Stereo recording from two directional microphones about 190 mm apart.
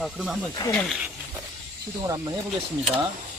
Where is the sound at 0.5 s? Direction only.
20° left (ahead or behind).